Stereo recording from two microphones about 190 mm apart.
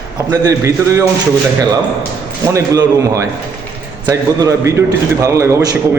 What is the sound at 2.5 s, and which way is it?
A man's voice, 15° right (ahead or behind).